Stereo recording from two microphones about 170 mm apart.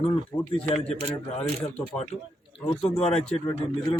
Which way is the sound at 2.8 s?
40° left (ahead or behind).